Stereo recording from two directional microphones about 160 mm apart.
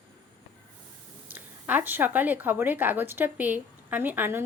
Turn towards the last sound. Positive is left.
turn(degrees=-15)  # may be behind; listen again after turning